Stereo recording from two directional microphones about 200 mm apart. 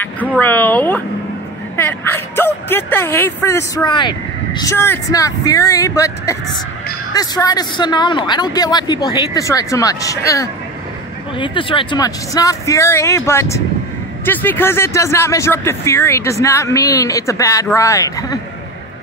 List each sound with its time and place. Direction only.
0.4 s a man's voice: 10° left (ahead or behind)